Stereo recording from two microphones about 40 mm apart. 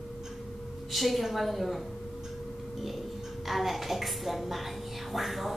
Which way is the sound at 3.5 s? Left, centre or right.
Centre.